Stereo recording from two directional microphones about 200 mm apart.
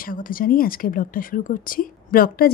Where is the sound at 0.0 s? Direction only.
45° left (ahead or behind).